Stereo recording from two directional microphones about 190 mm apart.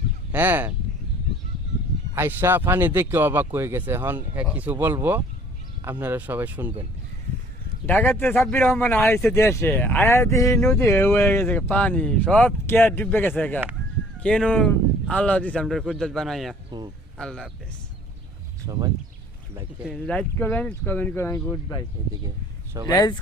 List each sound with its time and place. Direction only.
0.3 s speech: 10° right (ahead or behind)
2.1 s speech: 10° right (ahead or behind)
7.9 s speech: 10° left (ahead or behind)
18.6 s speech: 20° right (ahead or behind)
19.9 s speech: 5° left (ahead or behind)
22.0 s speech: 25° right (ahead or behind)
22.9 s speech: 20° left (ahead or behind)